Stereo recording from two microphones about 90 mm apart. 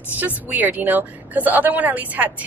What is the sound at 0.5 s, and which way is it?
A woman's voice, 20° right (ahead or behind).